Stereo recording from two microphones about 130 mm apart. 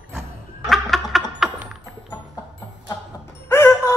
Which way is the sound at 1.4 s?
5° right (ahead or behind).